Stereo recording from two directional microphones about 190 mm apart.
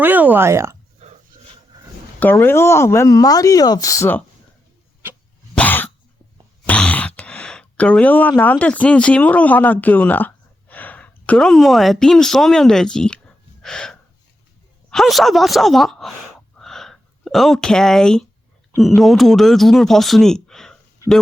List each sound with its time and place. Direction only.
0.0 s speech: 10° right (ahead or behind)
1.0 s filing: 35° right (ahead or behind)
2.1 s speech: 10° left (ahead or behind)
5.5 s cough: 10° left (ahead or behind)
6.7 s speech: 5° left (ahead or behind)
16.6 s a sound: centre (ahead or behind)
18.8 s speech: centre (ahead or behind)